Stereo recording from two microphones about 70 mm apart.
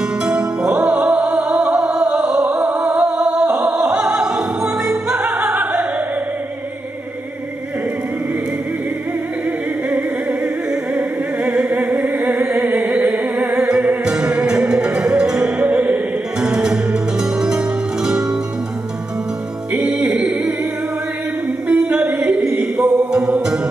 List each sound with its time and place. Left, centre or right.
0.4 s music: centre
3.7 s opera: centre
9.8 s opera: centre
11.4 s music: centre
20.1 s singing: centre
21.6 s music: centre
22.0 s a sound: centre
22.8 s mantra: centre